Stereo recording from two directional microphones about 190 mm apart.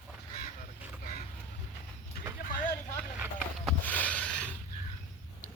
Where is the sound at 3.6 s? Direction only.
10° left (ahead or behind).